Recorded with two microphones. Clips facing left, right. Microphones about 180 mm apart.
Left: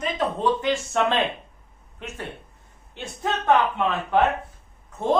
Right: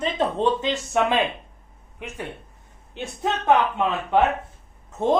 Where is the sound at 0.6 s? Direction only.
15° right (ahead or behind).